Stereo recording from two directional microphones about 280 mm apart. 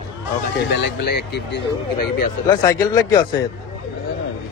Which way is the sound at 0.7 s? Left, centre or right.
Left.